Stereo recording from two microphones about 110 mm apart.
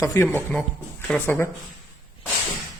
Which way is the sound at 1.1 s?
15° left (ahead or behind).